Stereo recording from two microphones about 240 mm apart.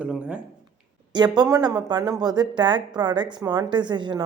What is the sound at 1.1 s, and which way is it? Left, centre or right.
A woman's voice, centre.